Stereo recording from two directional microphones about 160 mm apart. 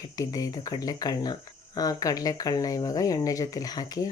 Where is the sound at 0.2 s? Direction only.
25° left (ahead or behind).